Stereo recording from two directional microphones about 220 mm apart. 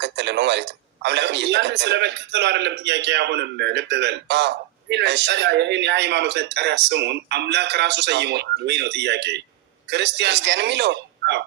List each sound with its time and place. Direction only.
0.0 s a man's voice: 50° right (ahead or behind)